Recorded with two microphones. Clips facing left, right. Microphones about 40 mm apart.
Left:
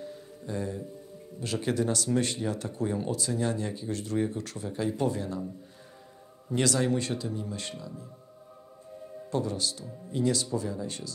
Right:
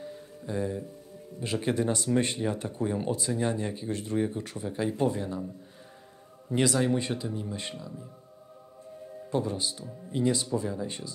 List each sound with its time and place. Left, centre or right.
0.0 s music: centre
1.4 s speech: centre
6.5 s speech: centre
9.3 s speech: centre